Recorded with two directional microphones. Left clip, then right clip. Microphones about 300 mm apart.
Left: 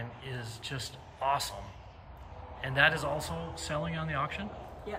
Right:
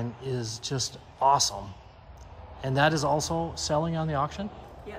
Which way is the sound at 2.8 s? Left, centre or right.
Centre.